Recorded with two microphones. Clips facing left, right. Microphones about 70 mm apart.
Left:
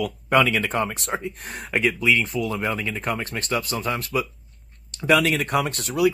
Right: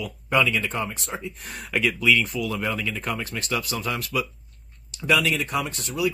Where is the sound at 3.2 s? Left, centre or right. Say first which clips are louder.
Left 2 dB; left.